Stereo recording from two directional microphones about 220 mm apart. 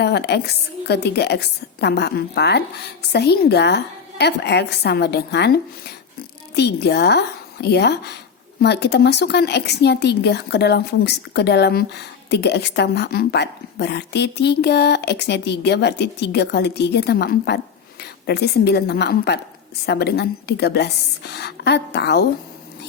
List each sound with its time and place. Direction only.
0.0 s a woman's voice: 50° left (ahead or behind)